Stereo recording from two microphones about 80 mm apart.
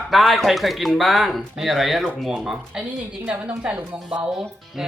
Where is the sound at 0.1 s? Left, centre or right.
Centre.